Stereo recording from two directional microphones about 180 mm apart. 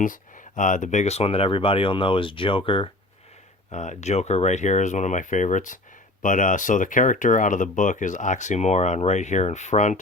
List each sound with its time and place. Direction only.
0.0 s speech: 45° left (ahead or behind); by 2.9 s 30° left (ahead or behind)
3.7 s speech: 40° left (ahead or behind)